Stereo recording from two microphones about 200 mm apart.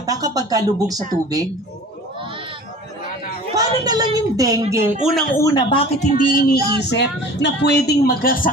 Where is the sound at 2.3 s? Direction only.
25° right (ahead or behind).